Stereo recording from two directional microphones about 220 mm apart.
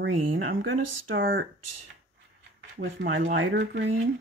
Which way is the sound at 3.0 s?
55° right (ahead or behind).